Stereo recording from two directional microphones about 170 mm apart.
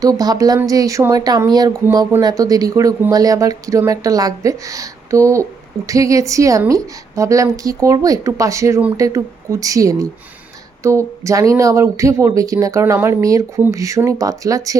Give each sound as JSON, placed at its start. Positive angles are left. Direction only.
{"t": 0.0, "sound": "speech", "side_deg": -20}